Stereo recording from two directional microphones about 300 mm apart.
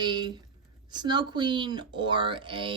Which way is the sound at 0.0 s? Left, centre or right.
Centre.